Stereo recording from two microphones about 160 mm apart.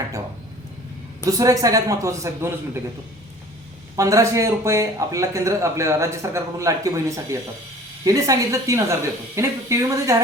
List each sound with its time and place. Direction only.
1.2 s speech: 20° right (ahead or behind)
3.9 s speech: 20° right (ahead or behind)